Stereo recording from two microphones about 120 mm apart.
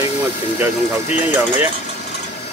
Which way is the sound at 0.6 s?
15° right (ahead or behind).